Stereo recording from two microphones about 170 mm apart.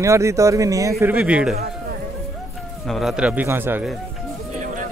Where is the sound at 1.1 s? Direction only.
5° right (ahead or behind).